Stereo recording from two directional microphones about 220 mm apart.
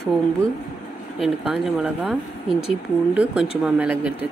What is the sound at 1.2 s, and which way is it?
Speech, centre (ahead or behind).